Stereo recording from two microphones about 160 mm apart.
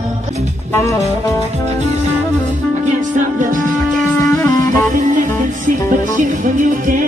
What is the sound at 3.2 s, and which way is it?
Music, 55° right (ahead or behind).